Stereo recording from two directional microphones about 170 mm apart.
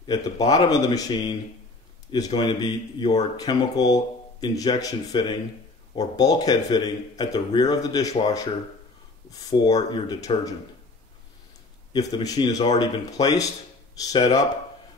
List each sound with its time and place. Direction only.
0.0 s speech: 20° left (ahead or behind)
9.3 s speech: 20° left (ahead or behind)
11.9 s speech: 25° left (ahead or behind)